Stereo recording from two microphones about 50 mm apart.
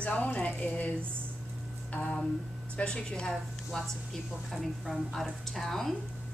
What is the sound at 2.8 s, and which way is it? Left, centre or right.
Speech, centre.